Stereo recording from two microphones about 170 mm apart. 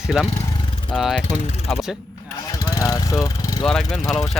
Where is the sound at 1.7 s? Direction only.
5° right (ahead or behind).